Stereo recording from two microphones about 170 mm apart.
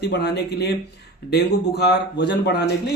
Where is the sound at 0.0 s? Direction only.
80° left.